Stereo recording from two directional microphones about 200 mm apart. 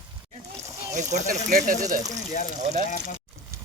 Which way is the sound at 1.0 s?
35° right (ahead or behind).